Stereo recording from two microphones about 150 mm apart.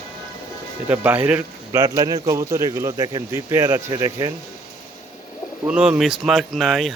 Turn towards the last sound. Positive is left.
turn(degrees=5)  # may be behind; listen again after turning